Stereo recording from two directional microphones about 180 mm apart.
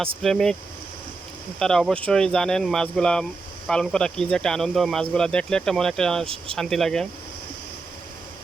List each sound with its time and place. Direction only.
0.2 s speech: centre (ahead or behind)
1.5 s speech: 5° left (ahead or behind)